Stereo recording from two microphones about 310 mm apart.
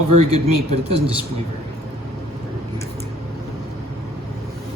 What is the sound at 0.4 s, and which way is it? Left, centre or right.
Speech, centre.